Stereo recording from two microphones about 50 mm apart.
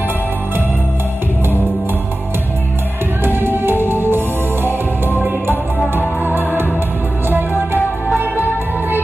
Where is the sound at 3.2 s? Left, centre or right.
Right.